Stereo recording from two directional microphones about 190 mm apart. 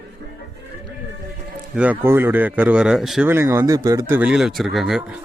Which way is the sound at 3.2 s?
15° right (ahead or behind).